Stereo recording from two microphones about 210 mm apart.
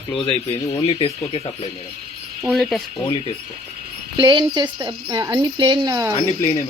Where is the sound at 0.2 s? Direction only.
25° left (ahead or behind).